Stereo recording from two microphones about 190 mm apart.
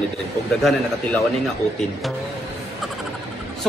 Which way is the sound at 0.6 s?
Centre (ahead or behind).